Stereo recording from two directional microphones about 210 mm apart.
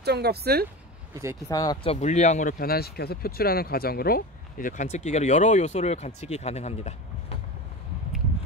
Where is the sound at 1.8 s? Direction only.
35° left (ahead or behind).